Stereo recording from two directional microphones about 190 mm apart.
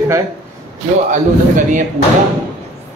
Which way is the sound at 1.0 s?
40° right (ahead or behind).